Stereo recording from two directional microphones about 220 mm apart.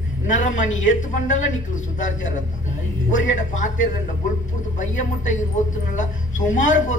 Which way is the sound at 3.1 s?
35° left (ahead or behind).